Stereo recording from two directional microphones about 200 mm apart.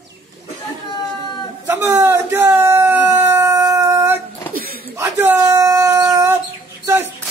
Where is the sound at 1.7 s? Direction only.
15° right (ahead or behind).